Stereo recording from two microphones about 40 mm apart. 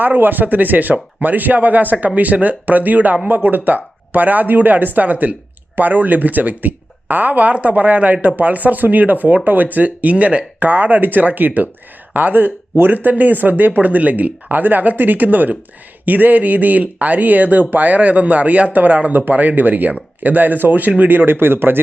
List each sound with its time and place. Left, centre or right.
0.0 s speech: right
21.1 s speech: right